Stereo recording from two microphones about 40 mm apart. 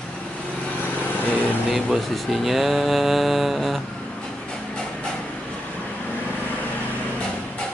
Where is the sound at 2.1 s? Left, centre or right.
Centre.